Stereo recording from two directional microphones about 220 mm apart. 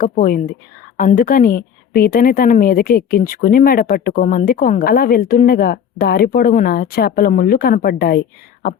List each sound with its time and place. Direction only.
0.0 s a woman's voice: 40° left (ahead or behind)